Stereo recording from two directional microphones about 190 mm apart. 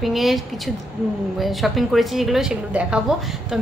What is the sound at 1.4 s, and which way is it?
A woman's voice, centre (ahead or behind).